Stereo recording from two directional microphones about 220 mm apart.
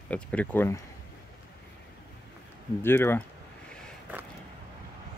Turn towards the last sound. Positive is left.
turn(degrees=-5)  # may be behind; listen again after turning